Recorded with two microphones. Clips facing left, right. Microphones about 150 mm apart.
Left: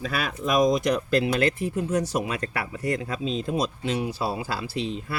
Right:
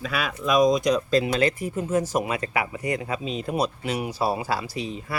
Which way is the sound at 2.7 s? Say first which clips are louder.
Even; 15° right (ahead or behind).